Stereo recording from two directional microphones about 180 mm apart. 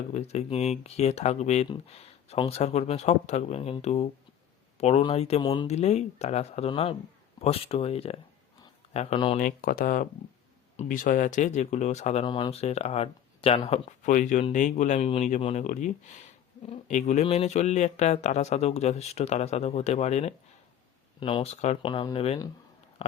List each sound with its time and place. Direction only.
0.1 s speech: 35° left (ahead or behind)
9.4 s speech: 50° left (ahead or behind)
12.2 s speech: 25° left (ahead or behind)
14.0 s speech: 45° left (ahead or behind)